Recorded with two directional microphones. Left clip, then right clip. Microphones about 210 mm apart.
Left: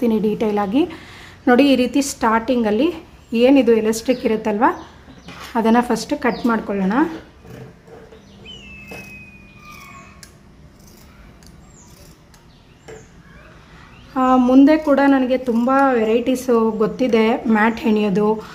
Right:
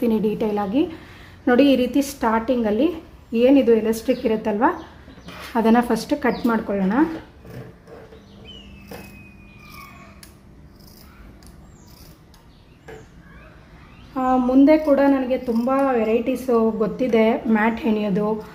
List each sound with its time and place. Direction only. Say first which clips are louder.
0.0 s a woman's voice: left 3 dB; 15° left (ahead or behind)
14.1 s speech: left 5 dB; 25° left (ahead or behind)